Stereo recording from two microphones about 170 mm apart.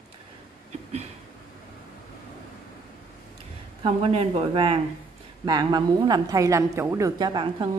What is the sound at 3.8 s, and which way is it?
A woman's voice, 35° right (ahead or behind).